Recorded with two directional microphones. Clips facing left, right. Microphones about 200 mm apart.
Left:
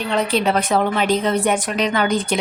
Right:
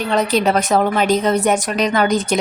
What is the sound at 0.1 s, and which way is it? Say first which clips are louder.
A woman's voice: right 2 dB; 40° right (ahead or behind).